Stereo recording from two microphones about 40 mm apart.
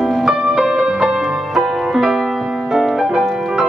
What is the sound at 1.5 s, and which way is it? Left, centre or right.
Music, centre.